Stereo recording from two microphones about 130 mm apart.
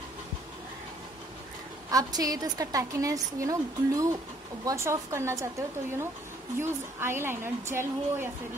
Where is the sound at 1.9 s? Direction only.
30° right (ahead or behind).